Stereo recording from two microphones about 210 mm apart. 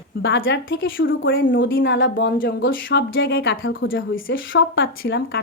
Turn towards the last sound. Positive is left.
turn(degrees=55)  # may be behind; listen again after turning